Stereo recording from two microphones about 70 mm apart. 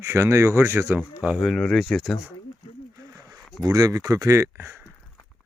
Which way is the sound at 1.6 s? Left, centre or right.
Centre.